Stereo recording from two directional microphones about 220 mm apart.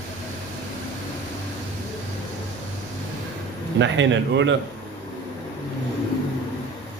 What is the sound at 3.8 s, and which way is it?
Speech, 55° right (ahead or behind).